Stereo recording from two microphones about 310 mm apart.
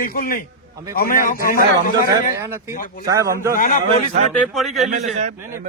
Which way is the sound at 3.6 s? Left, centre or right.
Left.